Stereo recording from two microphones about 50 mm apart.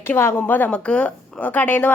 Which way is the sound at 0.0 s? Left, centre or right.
Left.